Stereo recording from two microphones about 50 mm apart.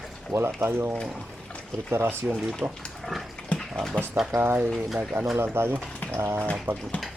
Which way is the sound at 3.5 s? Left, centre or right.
Left.